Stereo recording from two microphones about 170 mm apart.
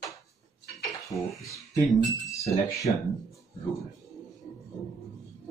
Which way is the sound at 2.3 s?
20° left (ahead or behind).